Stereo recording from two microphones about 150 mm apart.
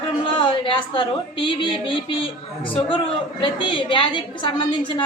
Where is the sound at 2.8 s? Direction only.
35° left (ahead or behind).